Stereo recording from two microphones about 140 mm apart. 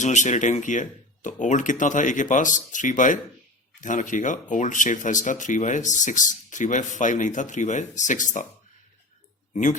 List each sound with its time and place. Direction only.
0.0 s speech: 60° left (ahead or behind)